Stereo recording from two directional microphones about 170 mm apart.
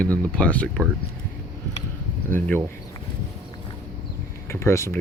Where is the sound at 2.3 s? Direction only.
10° left (ahead or behind).